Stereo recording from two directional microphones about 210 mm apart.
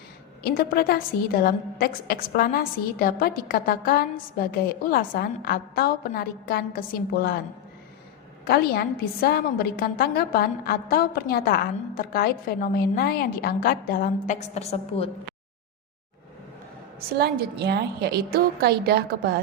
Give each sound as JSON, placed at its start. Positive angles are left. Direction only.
{"t": 0.4, "sound": "a woman's voice", "side_deg": 45}
{"t": 8.4, "sound": "a woman's voice", "side_deg": 50}
{"t": 17.2, "sound": "a woman's voice", "side_deg": -50}